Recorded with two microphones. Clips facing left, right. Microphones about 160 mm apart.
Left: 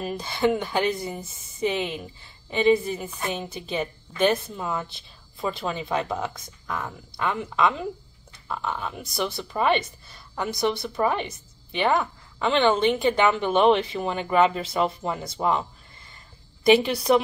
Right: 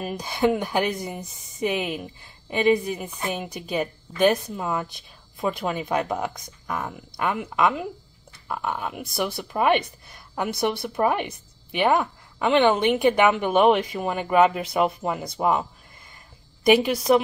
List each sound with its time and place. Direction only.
0.2 s a woman's voice: 15° right (ahead or behind)
3.7 s a woman's voice: 5° right (ahead or behind)
16.7 s a woman's voice: 10° right (ahead or behind)